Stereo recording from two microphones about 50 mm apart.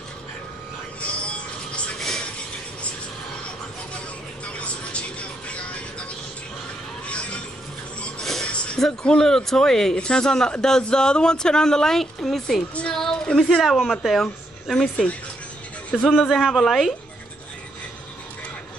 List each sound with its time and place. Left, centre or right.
1.0 s music: left
2.0 s a sound: centre
4.5 s vehicle: left
5.5 s music: left
7.1 s music: left
8.2 s a sound: centre
8.7 s speech: centre
15.9 s a man's voice: centre